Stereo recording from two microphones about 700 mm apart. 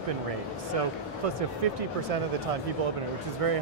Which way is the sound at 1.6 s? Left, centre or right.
Right.